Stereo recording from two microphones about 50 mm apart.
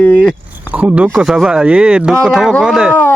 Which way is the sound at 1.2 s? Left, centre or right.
Centre.